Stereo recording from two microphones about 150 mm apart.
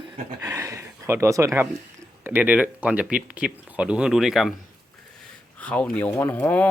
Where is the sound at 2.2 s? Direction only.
10° right (ahead or behind).